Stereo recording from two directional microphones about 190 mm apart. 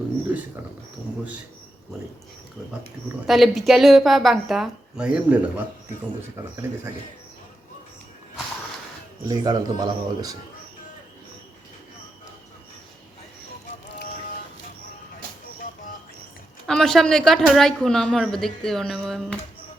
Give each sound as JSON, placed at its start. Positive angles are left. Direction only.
{"t": 3.2, "sound": "speech", "side_deg": 0}
{"t": 9.2, "sound": "speech", "side_deg": -20}
{"t": 13.8, "sound": "music", "side_deg": 65}
{"t": 16.6, "sound": "speech", "side_deg": 5}